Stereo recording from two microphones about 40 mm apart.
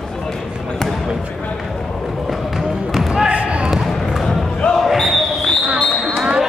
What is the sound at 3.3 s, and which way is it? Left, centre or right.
Basketball bounce, right.